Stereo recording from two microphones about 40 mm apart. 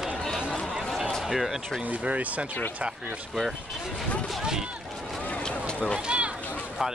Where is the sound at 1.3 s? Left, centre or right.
Centre.